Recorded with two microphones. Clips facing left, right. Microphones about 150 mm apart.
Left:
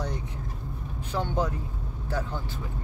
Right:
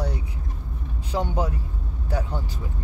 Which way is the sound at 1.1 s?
10° right (ahead or behind).